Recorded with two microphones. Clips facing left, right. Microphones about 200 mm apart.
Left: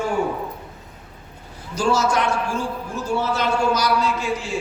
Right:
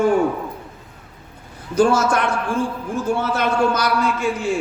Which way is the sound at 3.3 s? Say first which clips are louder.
Right 1 dB; 55° right (ahead or behind).